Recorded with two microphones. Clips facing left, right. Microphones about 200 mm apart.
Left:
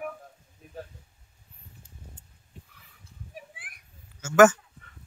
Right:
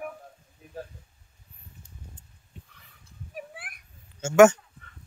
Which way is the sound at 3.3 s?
65° right (ahead or behind).